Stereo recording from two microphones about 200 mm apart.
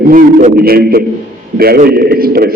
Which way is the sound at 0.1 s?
45° right (ahead or behind).